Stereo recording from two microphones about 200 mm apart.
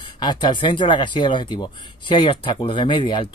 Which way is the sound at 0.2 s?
20° left (ahead or behind).